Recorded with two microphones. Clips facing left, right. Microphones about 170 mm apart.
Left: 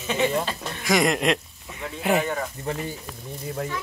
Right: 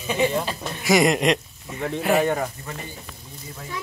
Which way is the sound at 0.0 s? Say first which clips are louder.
Right 1 dB; 15° right (ahead or behind).